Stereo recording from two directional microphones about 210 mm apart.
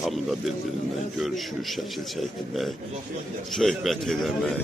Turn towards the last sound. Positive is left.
turn(degrees=0)  # may be behind; listen again after turning